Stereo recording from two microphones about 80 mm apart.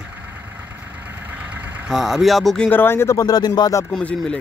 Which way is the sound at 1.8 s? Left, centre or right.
Centre.